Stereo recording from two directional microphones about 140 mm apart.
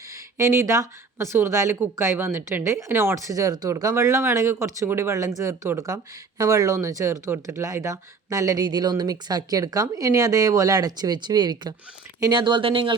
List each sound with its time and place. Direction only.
0.3 s speech: 20° right (ahead or behind); by 12.9 s 40° right (ahead or behind)